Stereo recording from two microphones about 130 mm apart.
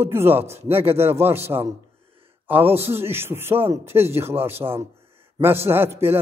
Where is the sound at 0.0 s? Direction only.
20° right (ahead or behind).